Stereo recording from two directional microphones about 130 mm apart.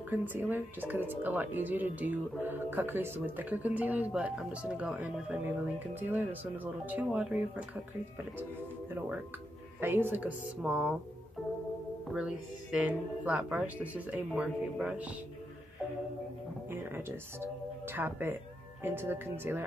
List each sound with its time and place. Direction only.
0.1 s speech: 15° right (ahead or behind)
9.8 s speech: 15° right (ahead or behind)
10.6 s speech: 5° right (ahead or behind)
12.1 s speech: 10° right (ahead or behind)
16.7 s speech: 15° right (ahead or behind)